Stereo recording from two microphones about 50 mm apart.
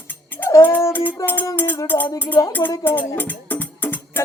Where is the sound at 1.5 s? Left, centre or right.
Left.